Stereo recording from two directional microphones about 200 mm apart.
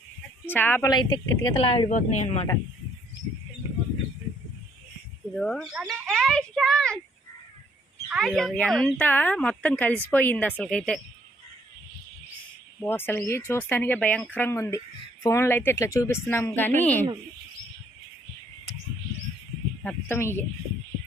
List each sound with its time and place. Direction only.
0.4 s a woman's voice: 10° left (ahead or behind); by 1.9 s 25° left (ahead or behind)
1.9 s speech: 40° left (ahead or behind)
5.3 s speech: 5° left (ahead or behind)
8.1 s speech: centre (ahead or behind)
12.8 s speech: 10° left (ahead or behind)
19.8 s speech: 10° left (ahead or behind)